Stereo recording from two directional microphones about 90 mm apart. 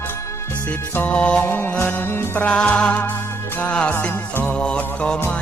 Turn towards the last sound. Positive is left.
turn(degrees=10)  # may be behind; listen again after turning